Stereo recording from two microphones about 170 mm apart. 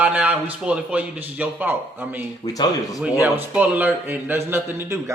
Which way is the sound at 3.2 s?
10° right (ahead or behind).